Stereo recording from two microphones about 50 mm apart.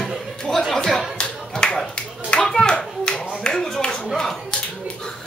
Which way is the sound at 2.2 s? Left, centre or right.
Centre.